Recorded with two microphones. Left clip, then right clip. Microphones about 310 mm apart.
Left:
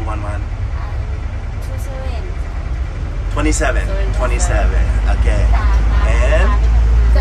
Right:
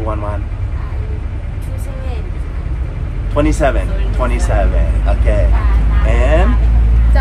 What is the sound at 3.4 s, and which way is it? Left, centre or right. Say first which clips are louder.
Speech: right 4 dB; centre.